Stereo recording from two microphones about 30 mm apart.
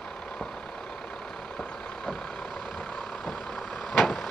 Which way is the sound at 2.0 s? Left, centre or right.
Centre.